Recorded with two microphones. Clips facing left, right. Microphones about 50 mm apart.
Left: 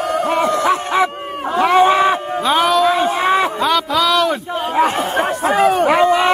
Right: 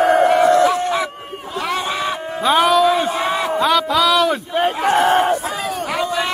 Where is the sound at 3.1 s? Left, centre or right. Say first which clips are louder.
Left 4 dB; left.